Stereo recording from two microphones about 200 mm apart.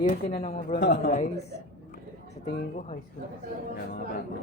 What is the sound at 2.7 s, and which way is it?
Speech, 35° left (ahead or behind).